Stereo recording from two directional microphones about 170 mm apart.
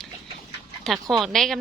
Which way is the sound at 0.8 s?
Centre (ahead or behind).